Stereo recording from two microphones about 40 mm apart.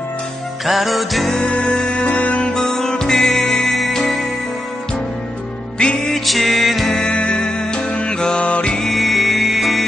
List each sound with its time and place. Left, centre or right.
0.7 s music: centre
1.4 s music: left
2.0 s music: left
2.5 s music: centre
5.8 s music: centre
6.1 s music: centre
6.9 s music: left
8.4 s music: left
8.9 s music: centre